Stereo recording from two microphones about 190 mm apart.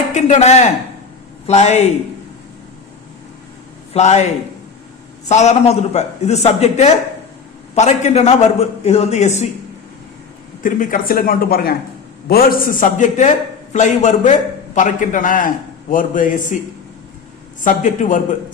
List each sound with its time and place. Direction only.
0.1 s a man's voice: 35° left (ahead or behind)
3.9 s a man's voice: 35° left (ahead or behind)
5.3 s a man's voice: 35° left (ahead or behind)
10.6 s a man's voice: 45° left (ahead or behind)
17.6 s a man's voice: 40° left (ahead or behind)